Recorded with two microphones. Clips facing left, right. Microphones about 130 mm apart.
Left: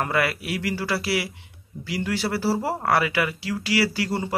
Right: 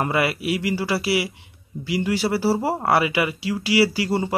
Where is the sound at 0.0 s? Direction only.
15° right (ahead or behind).